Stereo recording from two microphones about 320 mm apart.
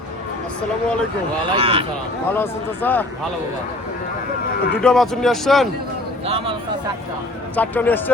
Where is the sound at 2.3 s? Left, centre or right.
Centre.